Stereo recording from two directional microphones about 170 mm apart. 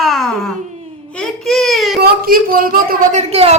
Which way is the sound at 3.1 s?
40° right (ahead or behind).